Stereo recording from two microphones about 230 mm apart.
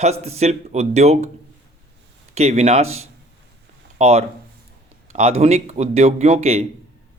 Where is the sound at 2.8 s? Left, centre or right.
Right.